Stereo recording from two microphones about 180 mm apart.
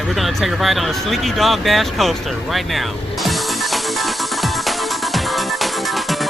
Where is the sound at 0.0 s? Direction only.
Centre (ahead or behind).